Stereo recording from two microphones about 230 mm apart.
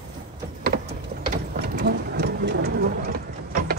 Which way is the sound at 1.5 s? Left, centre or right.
Right.